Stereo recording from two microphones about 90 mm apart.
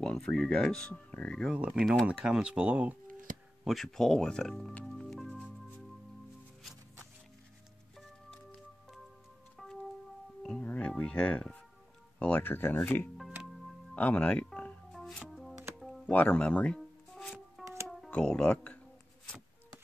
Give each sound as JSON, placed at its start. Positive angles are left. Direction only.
{"t": 0.0, "sound": "speech", "side_deg": 10}
{"t": 1.4, "sound": "speech", "side_deg": -10}
{"t": 3.6, "sound": "speech", "side_deg": 5}
{"t": 4.8, "sound": "music", "side_deg": 5}
{"t": 9.6, "sound": "music", "side_deg": 0}
{"t": 10.6, "sound": "music", "side_deg": 15}
{"t": 12.2, "sound": "speech", "side_deg": 20}
{"t": 13.4, "sound": "music", "side_deg": 0}
{"t": 13.9, "sound": "music", "side_deg": 15}
{"t": 14.9, "sound": "music", "side_deg": 0}
{"t": 16.1, "sound": "speech", "side_deg": 15}
{"t": 17.6, "sound": "music", "side_deg": 0}
{"t": 18.1, "sound": "speech", "side_deg": 10}